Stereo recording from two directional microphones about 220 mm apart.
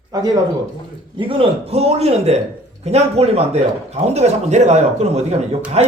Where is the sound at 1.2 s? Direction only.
25° right (ahead or behind).